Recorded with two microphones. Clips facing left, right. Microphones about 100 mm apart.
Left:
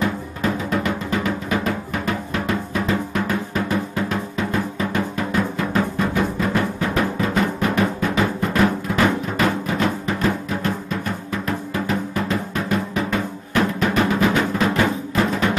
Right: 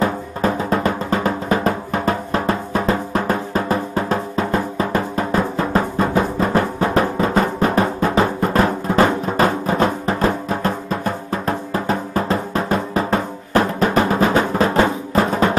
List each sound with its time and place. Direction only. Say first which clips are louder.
0.0 s drum: right 4 dB; 35° right (ahead or behind)